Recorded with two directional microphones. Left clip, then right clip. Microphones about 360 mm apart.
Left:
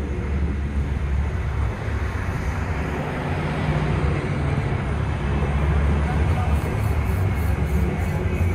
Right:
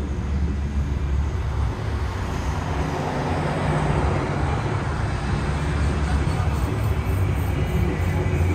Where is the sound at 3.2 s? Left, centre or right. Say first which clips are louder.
Right 2 dB; right.